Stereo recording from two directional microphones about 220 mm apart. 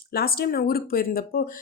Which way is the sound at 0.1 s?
45° left (ahead or behind).